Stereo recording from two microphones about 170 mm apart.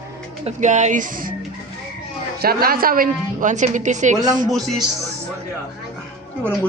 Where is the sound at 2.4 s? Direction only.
65° right (ahead or behind); by 4.1 s 45° right (ahead or behind).